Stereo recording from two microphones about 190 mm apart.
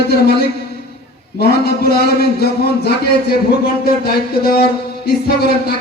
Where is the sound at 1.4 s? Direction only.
55° left (ahead or behind).